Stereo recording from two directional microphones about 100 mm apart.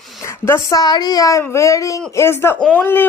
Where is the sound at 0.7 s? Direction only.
40° left (ahead or behind).